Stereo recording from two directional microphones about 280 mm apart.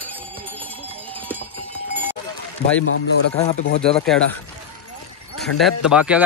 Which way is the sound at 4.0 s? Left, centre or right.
Centre.